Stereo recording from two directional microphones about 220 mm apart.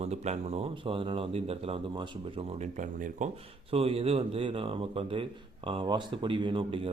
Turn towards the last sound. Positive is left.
turn(degrees=-25)  # may be behind; listen again after turning